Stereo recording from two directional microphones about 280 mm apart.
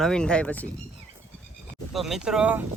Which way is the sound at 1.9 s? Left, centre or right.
Centre.